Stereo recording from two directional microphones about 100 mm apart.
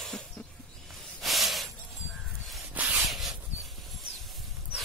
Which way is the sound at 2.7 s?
15° right (ahead or behind).